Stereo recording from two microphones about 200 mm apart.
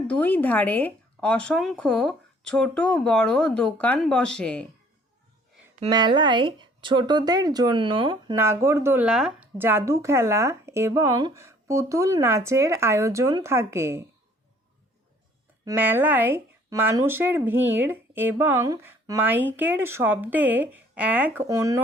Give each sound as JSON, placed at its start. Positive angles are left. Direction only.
{"t": 0.1, "sound": "speech", "side_deg": 10}
{"t": 5.9, "sound": "speech", "side_deg": -20}
{"t": 8.4, "sound": "speech", "side_deg": -15}
{"t": 15.6, "sound": "speech", "side_deg": -10}